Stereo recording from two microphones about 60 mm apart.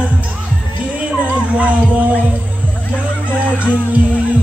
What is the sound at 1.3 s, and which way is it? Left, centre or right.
Music, right.